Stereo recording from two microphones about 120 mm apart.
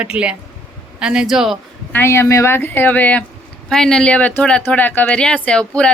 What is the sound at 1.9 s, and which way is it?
Speech, 20° left (ahead or behind).